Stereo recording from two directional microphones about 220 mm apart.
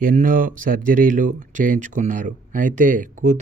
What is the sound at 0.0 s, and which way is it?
Speech, 40° right (ahead or behind).